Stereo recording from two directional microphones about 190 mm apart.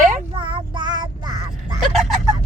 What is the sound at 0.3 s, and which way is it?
Child singing, 25° right (ahead or behind).